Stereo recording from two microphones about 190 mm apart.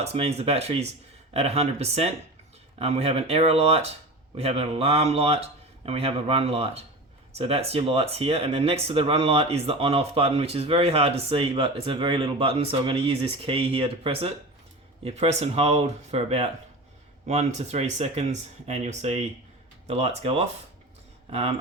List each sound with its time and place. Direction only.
0.0 s speech: 35° right (ahead or behind)